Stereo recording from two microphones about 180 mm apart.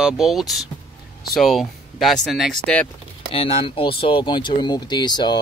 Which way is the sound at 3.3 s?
30° left (ahead or behind).